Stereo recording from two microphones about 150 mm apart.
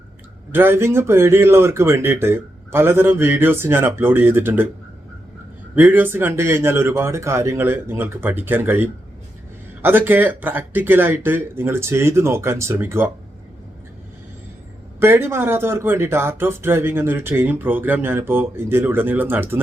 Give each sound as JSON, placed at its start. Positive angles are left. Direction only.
{"t": 0.5, "sound": "speech", "side_deg": -15}
{"t": 5.7, "sound": "speech", "side_deg": -15}
{"t": 14.9, "sound": "speech", "side_deg": -15}